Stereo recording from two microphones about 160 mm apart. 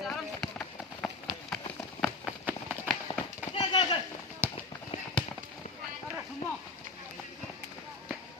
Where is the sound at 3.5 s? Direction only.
30° left (ahead or behind).